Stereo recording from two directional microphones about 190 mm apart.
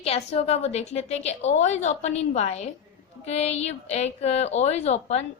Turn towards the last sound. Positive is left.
turn(degrees=35)  # may be behind; listen again after turning